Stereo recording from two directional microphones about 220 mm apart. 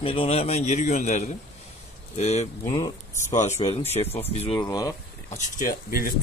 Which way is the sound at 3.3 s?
30° left (ahead or behind).